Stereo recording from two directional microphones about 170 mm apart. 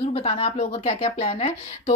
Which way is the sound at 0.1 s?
40° left (ahead or behind).